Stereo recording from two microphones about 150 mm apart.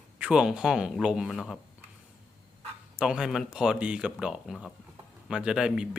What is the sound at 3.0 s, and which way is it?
Speech, 5° right (ahead or behind).